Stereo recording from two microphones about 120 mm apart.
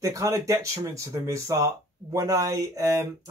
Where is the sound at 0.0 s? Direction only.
25° right (ahead or behind).